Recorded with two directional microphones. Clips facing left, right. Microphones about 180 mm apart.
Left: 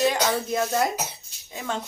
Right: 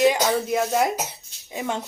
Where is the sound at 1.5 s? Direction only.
15° right (ahead or behind).